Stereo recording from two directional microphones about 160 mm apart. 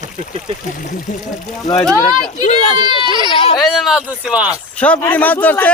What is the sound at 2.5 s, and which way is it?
Speech, 45° left (ahead or behind).